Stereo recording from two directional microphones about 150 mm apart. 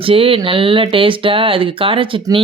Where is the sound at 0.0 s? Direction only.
35° right (ahead or behind).